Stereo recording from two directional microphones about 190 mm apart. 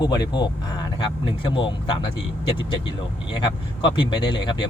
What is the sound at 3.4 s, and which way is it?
A man's voice, 25° left (ahead or behind).